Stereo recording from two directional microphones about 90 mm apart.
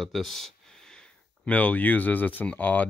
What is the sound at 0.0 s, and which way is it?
Speech, centre (ahead or behind).